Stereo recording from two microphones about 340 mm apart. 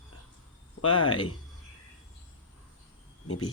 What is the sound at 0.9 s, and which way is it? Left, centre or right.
Speech, centre.